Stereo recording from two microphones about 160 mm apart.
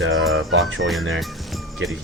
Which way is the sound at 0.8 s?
Centre (ahead or behind).